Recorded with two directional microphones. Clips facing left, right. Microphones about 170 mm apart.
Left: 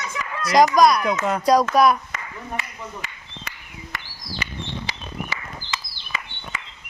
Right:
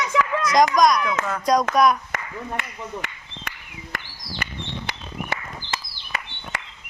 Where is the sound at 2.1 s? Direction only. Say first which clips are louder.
Right 2 dB; 55° right (ahead or behind).